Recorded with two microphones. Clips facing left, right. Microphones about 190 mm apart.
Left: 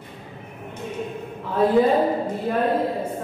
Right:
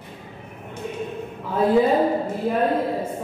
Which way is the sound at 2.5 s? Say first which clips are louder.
Right 1 dB; 5° right (ahead or behind).